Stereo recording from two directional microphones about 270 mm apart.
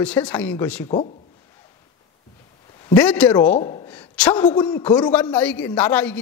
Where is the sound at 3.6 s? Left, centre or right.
Centre.